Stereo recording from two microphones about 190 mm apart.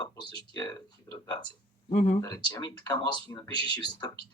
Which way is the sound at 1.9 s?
35° left (ahead or behind).